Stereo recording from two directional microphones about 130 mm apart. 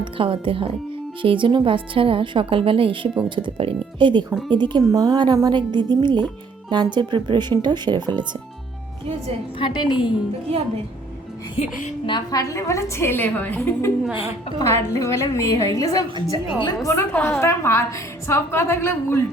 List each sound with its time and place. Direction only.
0.0 s a woman's voice: 45° right (ahead or behind)
4.9 s speech: 25° right (ahead or behind)
9.6 s a woman's voice: 40° left (ahead or behind)
12.0 s a woman's voice: 35° left (ahead or behind); by 13.9 s 15° left (ahead or behind)
14.0 s a woman's voice: 10° right (ahead or behind)
14.6 s a woman's voice: 25° left (ahead or behind)
17.1 s a woman's voice: 10° left (ahead or behind)